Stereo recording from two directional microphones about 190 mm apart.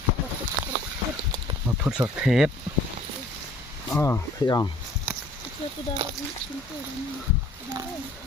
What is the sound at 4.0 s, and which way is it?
Speech, 15° left (ahead or behind).